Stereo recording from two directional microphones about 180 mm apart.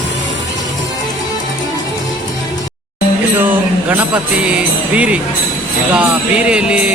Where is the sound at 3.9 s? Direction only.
5° right (ahead or behind).